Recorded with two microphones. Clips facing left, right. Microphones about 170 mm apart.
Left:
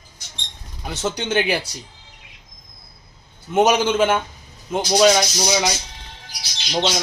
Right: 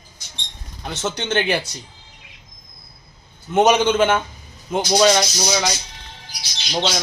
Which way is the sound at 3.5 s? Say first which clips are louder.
Right 1 dB; 5° left (ahead or behind).